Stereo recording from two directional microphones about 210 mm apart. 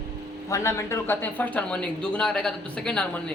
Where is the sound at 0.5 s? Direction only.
15° left (ahead or behind).